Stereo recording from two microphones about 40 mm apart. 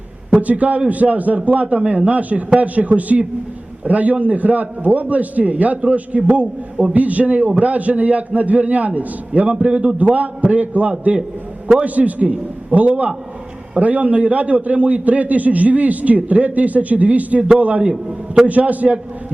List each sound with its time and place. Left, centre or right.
0.3 s a man's voice: right